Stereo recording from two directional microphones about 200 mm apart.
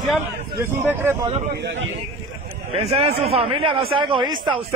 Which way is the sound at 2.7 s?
30° right (ahead or behind).